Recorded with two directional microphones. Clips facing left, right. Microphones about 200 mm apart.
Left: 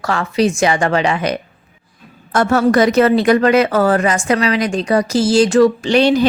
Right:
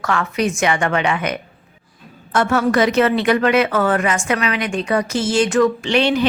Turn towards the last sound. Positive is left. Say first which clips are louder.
# left 4 dB
turn(degrees=40)  # may be behind; listen again after turning